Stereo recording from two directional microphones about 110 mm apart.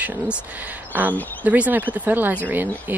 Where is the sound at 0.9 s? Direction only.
20° right (ahead or behind).